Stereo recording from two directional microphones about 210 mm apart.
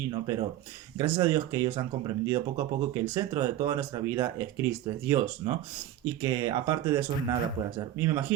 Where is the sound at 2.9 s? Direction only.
10° right (ahead or behind).